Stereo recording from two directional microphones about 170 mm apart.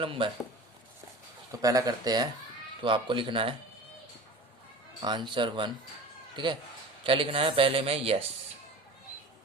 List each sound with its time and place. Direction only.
0.0 s a man's voice: 30° right (ahead or behind)
1.6 s speech: 20° right (ahead or behind)
5.0 s a man's voice: 25° right (ahead or behind)